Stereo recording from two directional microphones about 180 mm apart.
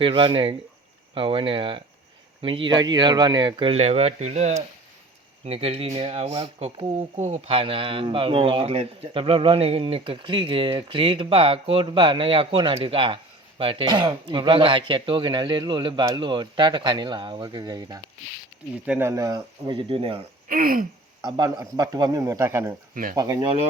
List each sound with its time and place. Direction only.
0.0 s speech: 25° right (ahead or behind)
20.5 s speech: 50° right (ahead or behind)
21.2 s speech: 25° right (ahead or behind)